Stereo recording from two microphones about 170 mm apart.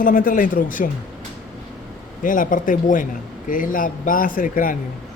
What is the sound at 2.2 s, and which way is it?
A man's voice, 50° left (ahead or behind).